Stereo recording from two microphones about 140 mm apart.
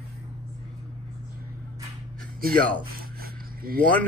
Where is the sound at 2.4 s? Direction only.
90° right.